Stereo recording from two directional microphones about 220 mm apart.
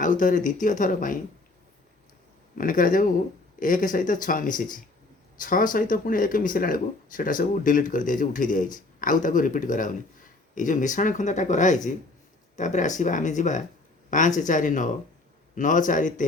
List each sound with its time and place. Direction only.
0.0 s speech: 35° left (ahead or behind)
2.6 s speech: 40° left (ahead or behind)